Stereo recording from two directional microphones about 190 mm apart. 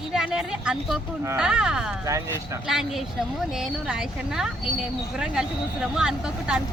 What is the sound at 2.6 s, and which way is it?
Speech, centre (ahead or behind).